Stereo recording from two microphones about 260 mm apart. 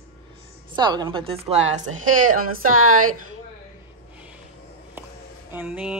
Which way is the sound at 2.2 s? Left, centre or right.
Right.